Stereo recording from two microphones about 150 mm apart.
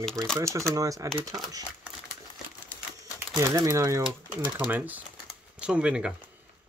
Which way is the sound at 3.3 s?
20° right (ahead or behind).